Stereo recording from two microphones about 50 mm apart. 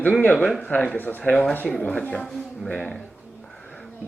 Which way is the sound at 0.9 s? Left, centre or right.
Left.